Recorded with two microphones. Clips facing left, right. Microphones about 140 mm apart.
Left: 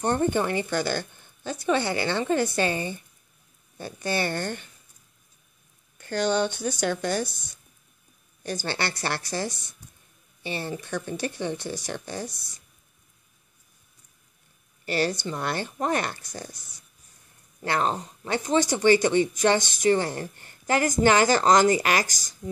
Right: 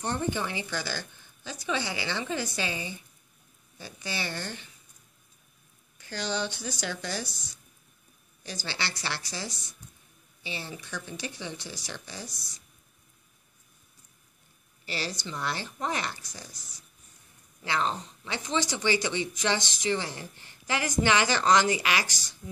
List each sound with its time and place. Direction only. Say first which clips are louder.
0.0 s speech: left 7 dB; 50° left (ahead or behind)
5.9 s speech: left 8 dB; 55° left (ahead or behind)
14.9 s speech: left 9 dB; 55° left (ahead or behind)